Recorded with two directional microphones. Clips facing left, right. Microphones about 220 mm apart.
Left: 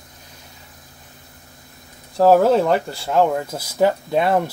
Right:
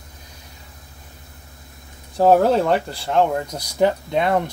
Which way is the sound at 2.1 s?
Centre (ahead or behind).